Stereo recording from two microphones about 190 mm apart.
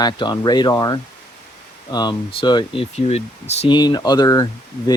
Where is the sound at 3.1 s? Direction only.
35° left (ahead or behind).